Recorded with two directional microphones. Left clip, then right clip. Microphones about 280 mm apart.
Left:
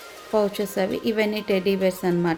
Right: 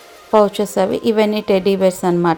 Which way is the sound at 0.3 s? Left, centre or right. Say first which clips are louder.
Right 9 dB; right.